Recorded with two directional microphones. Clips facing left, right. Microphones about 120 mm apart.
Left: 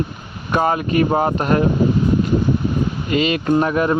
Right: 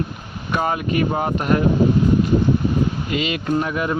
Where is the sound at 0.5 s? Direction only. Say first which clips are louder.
Left 4 dB; 40° left (ahead or behind).